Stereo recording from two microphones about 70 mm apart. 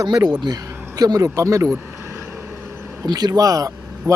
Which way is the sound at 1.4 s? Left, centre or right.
Right.